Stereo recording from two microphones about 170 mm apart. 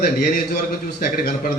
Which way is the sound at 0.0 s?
60° left (ahead or behind).